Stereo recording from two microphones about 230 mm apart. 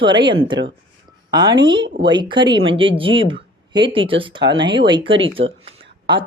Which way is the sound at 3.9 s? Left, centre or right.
Right.